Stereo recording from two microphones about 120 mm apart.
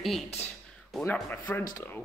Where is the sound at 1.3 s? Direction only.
15° left (ahead or behind).